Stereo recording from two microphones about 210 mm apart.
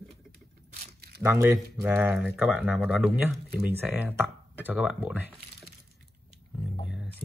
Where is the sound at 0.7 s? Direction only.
45° right (ahead or behind).